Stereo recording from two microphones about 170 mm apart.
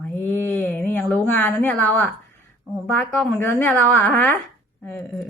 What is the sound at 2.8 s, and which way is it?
A woman's voice, 5° left (ahead or behind).